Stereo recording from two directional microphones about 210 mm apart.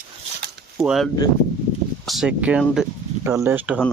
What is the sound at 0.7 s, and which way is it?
Whip, centre (ahead or behind).